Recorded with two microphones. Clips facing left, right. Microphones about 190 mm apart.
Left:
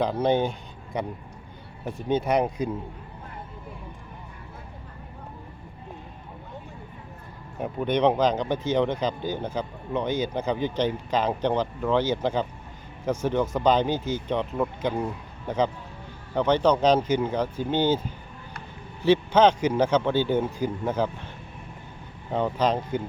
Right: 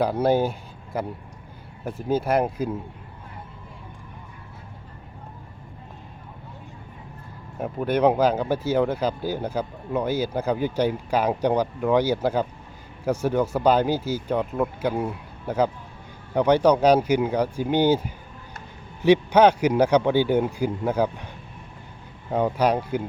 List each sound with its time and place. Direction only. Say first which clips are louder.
0.0 s speech: right 2 dB; 10° right (ahead or behind)
7.6 s speech: right 2 dB; 5° right (ahead or behind)
22.3 s speech: right 3 dB; 10° right (ahead or behind)